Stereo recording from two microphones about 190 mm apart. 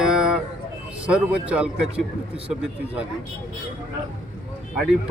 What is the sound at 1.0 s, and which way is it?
Speech, 5° right (ahead or behind).